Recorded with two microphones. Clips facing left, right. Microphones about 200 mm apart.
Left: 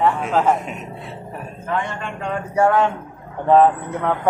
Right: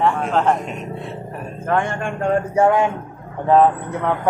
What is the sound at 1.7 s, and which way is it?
Speech, 50° right (ahead or behind).